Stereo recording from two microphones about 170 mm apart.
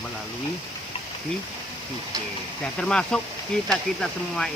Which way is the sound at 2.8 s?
5° left (ahead or behind).